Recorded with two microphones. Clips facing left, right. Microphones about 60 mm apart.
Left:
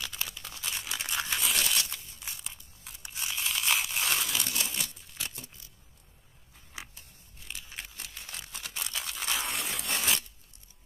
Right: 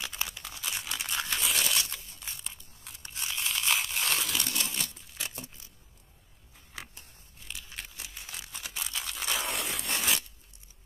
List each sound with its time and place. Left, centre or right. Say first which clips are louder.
0.0 s crunch: right 1 dB; right
0.4 s tearing: right 1 dB; centre
1.9 s crumpling: even; centre
2.1 s tearing: even; centre
7.4 s tearing: even; centre